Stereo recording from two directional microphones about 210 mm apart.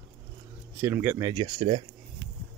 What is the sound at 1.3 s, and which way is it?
Speech, 30° right (ahead or behind).